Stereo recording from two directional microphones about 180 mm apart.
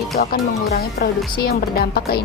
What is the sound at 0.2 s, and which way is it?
A woman's voice, 55° left (ahead or behind).